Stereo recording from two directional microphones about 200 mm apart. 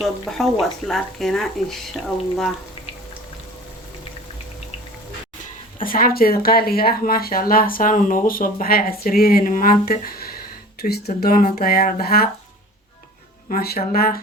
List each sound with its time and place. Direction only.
0.0 s speech: centre (ahead or behind)
5.8 s speech: 45° left (ahead or behind)
13.5 s speech: 50° left (ahead or behind)